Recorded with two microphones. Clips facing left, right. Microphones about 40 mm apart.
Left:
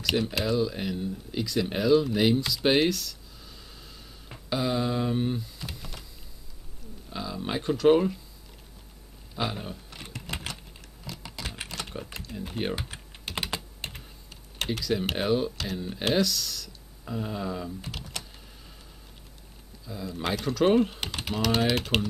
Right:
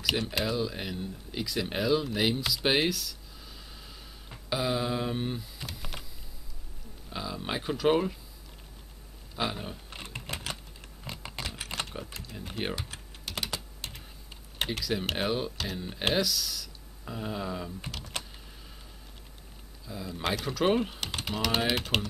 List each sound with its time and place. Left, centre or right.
0.0 s speech: centre
5.9 s a sound: right
7.1 s speech: centre
9.3 s a sound: centre
10.3 s typing: right
12.4 s speech: centre
12.9 s typing: centre
14.8 s speech: centre
18.1 s power windows: right
19.9 s speech: centre